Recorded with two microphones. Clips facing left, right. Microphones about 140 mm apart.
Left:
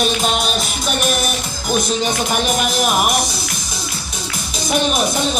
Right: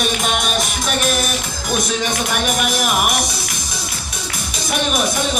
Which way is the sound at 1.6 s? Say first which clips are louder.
Left 3 dB; centre (ahead or behind).